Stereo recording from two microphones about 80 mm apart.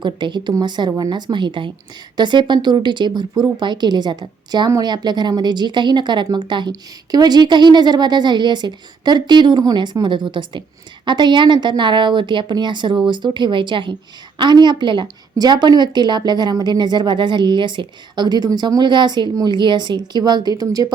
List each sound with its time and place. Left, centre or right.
0.0 s a woman's voice: right
2.1 s a woman's voice: right
14.3 s a woman's voice: right